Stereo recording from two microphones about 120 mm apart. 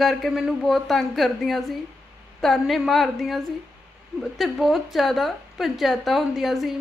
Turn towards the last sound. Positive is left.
turn(degrees=0)  # may be behind; listen again after turning